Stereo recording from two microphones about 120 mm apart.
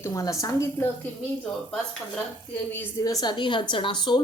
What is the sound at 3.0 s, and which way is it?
A woman's voice, 35° left (ahead or behind).